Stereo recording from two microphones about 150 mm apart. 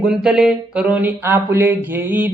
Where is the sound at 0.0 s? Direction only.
5° right (ahead or behind).